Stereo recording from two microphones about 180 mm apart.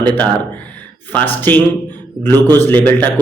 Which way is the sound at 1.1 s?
10° left (ahead or behind).